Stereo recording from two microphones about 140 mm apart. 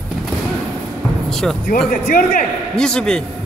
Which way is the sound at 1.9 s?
80° left.